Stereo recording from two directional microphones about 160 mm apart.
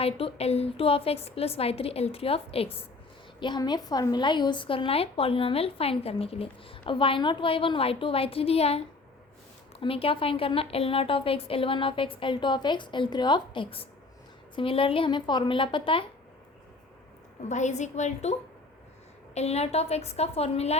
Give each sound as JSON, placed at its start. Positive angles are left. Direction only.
{"t": 0.0, "sound": "a woman's voice", "side_deg": 35}
{"t": 3.4, "sound": "a woman's voice", "side_deg": 25}
{"t": 9.8, "sound": "a woman's voice", "side_deg": 35}
{"t": 17.5, "sound": "a woman's voice", "side_deg": 45}